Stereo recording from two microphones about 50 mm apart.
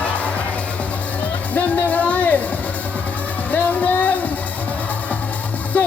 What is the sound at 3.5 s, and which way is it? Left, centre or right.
Music, left.